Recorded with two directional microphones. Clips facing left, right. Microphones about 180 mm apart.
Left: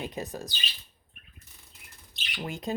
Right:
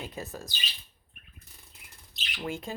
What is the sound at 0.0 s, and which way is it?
Speech, 15° left (ahead or behind).